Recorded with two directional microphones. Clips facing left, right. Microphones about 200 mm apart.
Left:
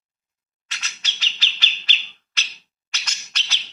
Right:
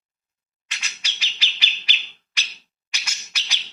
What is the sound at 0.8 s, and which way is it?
Bird, 10° right (ahead or behind).